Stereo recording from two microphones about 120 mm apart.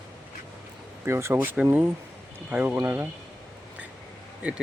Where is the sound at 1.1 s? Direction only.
20° right (ahead or behind).